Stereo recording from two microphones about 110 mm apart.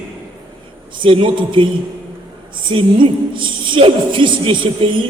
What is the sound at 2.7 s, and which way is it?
A man's voice, 50° right (ahead or behind).